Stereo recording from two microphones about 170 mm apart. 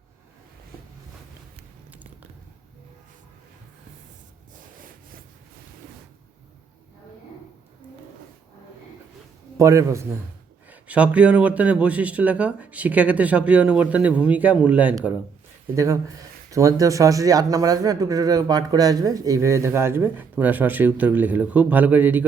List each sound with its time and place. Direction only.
9.6 s a man's voice: 15° right (ahead or behind)
15.7 s speech: 20° right (ahead or behind)